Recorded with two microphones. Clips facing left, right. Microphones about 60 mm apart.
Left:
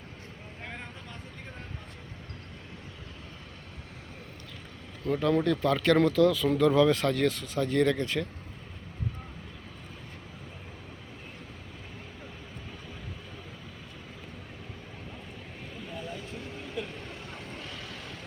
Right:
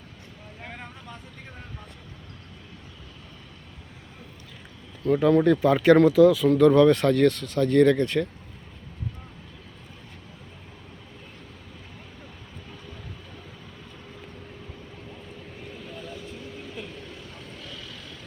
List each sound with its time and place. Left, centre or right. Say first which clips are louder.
0.6 s vehicle: right 1 dB; centre
5.0 s speech: right 7 dB; centre
6.0 s speech: right 6 dB; centre
17.1 s boat: even; left